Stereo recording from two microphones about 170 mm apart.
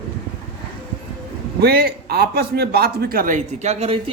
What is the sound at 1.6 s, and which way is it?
A man's voice, 65° right (ahead or behind).